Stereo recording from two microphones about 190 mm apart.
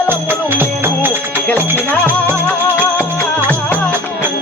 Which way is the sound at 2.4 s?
10° left (ahead or behind).